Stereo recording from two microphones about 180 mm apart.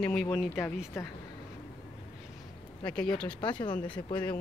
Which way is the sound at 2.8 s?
5° left (ahead or behind).